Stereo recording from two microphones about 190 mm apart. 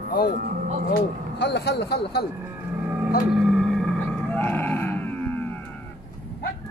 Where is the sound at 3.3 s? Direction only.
Centre (ahead or behind).